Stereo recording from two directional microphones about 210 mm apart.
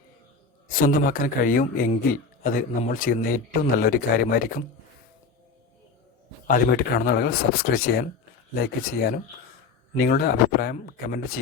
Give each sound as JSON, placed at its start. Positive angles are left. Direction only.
{"t": 0.7, "sound": "a man's voice", "side_deg": 40}
{"t": 6.5, "sound": "speech", "side_deg": 45}